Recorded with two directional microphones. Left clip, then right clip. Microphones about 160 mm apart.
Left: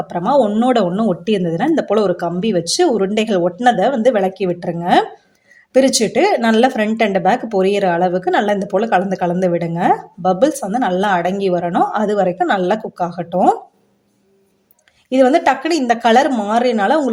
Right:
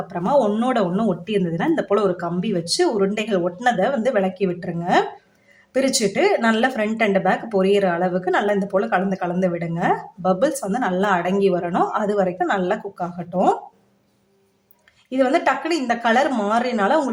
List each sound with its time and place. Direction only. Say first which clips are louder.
0.1 s speech: left 4 dB; 25° left (ahead or behind)
15.1 s speech: left 6 dB; 30° left (ahead or behind)